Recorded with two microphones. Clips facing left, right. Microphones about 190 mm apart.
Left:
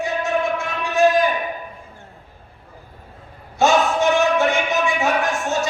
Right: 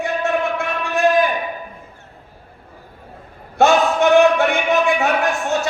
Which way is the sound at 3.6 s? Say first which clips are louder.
Right 3 dB; 60° right (ahead or behind).